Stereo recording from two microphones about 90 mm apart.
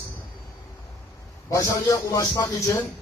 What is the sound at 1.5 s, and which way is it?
Speech, 40° left (ahead or behind).